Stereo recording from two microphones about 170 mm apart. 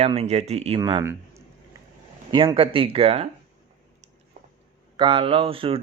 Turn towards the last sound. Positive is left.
turn(degrees=-35)  # may be behind; listen again after turning